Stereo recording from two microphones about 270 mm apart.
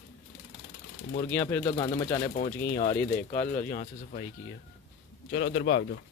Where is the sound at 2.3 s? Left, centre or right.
Left.